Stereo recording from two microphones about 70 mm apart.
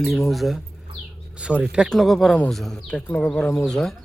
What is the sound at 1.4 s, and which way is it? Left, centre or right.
Speech, centre.